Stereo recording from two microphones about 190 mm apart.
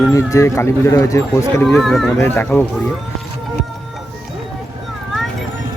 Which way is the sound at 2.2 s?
10° left (ahead or behind).